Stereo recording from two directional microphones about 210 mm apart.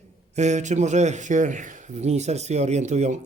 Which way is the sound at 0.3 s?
35° right (ahead or behind).